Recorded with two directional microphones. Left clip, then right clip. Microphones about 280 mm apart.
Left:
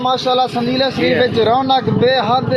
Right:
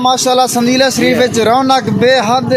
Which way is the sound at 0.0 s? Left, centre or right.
Right.